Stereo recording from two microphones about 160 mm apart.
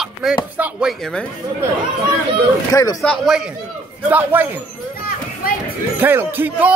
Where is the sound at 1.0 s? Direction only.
5° left (ahead or behind).